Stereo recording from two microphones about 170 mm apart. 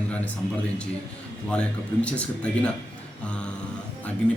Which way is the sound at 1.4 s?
5° left (ahead or behind).